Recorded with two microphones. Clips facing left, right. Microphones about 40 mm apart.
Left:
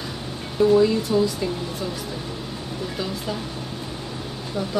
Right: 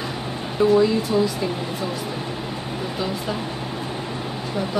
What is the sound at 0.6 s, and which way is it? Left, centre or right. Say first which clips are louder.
Speech: even; centre.